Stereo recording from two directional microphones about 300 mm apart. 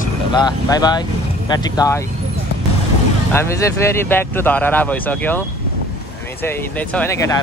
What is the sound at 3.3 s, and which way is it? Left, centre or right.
Speech, centre.